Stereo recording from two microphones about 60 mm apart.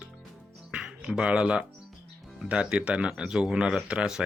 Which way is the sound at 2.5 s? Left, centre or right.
Centre.